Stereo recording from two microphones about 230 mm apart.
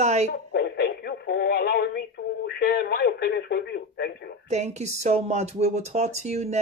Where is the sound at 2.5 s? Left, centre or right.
Left.